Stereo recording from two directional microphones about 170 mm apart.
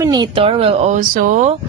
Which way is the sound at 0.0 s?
25° right (ahead or behind).